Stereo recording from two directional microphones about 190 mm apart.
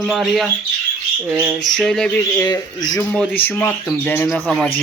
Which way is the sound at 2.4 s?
20° left (ahead or behind).